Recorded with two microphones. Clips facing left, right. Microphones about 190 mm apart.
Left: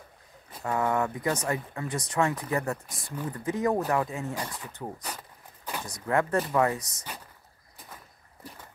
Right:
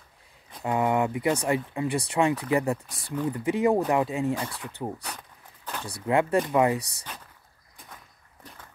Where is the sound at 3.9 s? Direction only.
15° right (ahead or behind).